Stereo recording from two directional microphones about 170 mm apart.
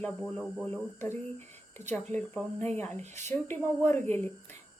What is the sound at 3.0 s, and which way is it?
Speech, 45° right (ahead or behind).